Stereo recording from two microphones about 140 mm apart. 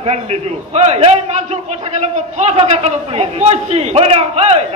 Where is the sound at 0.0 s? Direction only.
50° right (ahead or behind).